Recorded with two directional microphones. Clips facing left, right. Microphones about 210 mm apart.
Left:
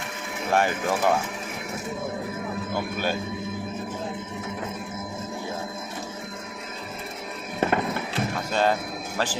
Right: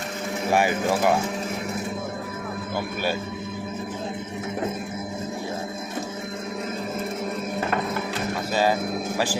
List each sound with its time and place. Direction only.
0.5 s speech: 10° right (ahead or behind)
9.1 s speech: 10° right (ahead or behind)